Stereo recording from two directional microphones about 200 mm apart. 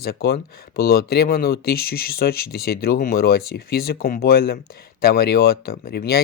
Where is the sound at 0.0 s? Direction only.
55° left (ahead or behind).